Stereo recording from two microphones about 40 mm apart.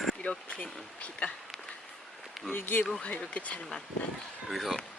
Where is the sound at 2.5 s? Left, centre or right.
Left.